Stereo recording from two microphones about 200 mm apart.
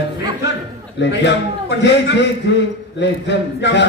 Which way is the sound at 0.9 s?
60° left (ahead or behind).